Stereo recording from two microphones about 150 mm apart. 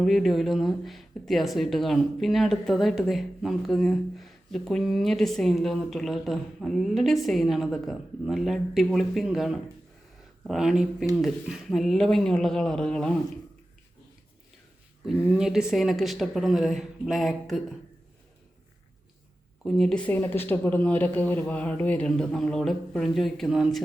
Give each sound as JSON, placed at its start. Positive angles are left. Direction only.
{"t": 0.0, "sound": "speech", "side_deg": 0}
{"t": 15.0, "sound": "speech", "side_deg": -5}
{"t": 19.6, "sound": "speech", "side_deg": 0}